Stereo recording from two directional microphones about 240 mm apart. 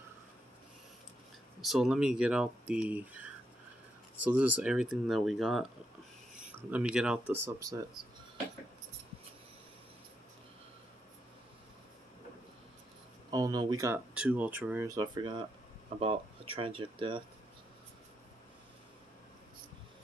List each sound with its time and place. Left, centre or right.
1.6 s speech: centre
6.7 s speech: centre
13.3 s speech: centre